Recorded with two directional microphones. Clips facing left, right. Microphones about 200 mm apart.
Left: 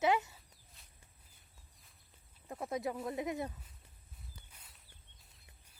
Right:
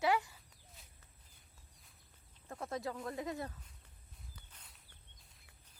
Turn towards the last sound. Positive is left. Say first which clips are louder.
# even
turn(degrees=10)  # may be behind; listen again after turning